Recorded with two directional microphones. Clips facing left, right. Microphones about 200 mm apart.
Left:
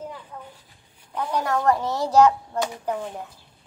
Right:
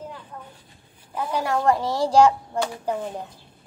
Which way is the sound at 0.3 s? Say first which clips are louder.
Even; 5° left (ahead or behind).